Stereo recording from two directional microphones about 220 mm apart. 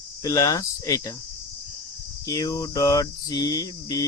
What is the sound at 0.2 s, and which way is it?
Speech, 15° left (ahead or behind).